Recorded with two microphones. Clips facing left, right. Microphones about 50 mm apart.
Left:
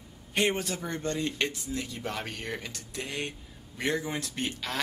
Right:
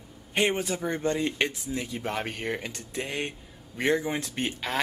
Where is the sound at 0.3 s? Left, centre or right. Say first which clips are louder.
Right 2 dB; centre.